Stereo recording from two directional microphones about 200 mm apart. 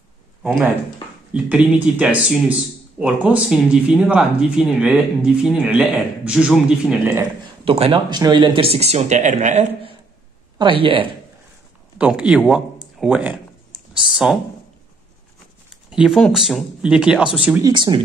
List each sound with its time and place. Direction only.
0.4 s speech: 5° right (ahead or behind)
7.2 s speech: 30° right (ahead or behind)
12.0 s speech: 5° right (ahead or behind)
15.7 s speech: 5° right (ahead or behind)
17.6 s speech: 25° right (ahead or behind)